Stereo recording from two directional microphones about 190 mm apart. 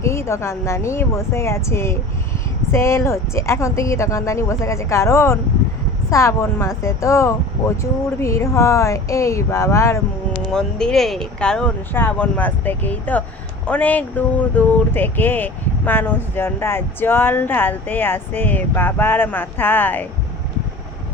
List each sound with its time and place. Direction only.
0.0 s speech: 15° left (ahead or behind)
10.5 s speech: 5° left (ahead or behind)